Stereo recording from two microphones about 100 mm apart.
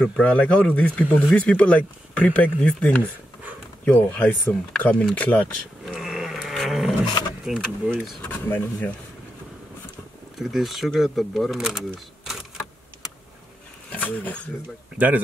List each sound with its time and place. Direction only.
0.0 s speech: 10° left (ahead or behind)
5.9 s a sound: 5° right (ahead or behind)
7.4 s speech: 10° right (ahead or behind)
8.2 s speech: 15° left (ahead or behind)
10.4 s speech: centre (ahead or behind)
13.9 s speech: 15° left (ahead or behind)
15.0 s speech: 15° right (ahead or behind)